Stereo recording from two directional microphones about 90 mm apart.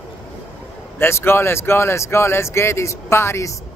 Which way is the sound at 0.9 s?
25° left (ahead or behind).